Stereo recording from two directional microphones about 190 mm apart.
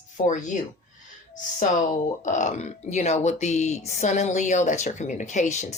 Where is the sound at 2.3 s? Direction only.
40° left (ahead or behind).